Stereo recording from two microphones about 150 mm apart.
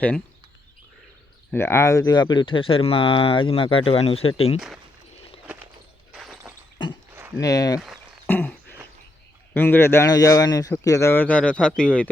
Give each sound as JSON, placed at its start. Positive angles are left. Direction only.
{"t": 1.5, "sound": "speech", "side_deg": 15}
{"t": 4.5, "sound": "speech", "side_deg": -5}
{"t": 6.1, "sound": "a sound", "side_deg": 0}
{"t": 7.3, "sound": "speech", "side_deg": 25}
{"t": 8.3, "sound": "a sound", "side_deg": 10}
{"t": 9.6, "sound": "a man's voice", "side_deg": 15}